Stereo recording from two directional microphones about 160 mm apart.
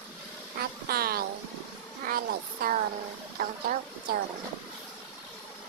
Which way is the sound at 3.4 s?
60° right (ahead or behind).